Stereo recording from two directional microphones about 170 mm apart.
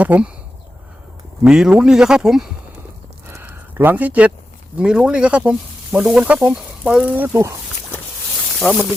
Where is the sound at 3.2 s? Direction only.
10° right (ahead or behind).